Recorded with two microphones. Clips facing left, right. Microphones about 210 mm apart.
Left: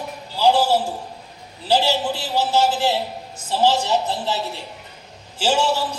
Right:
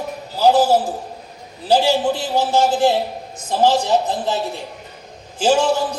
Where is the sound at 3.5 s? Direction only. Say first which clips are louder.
Right 3 dB; 50° right (ahead or behind).